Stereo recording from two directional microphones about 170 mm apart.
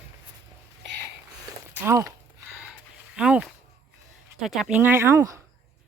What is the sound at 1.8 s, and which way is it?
Walk, 15° right (ahead or behind).